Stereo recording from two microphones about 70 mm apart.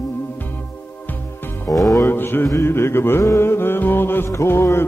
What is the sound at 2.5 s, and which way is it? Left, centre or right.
Music, left.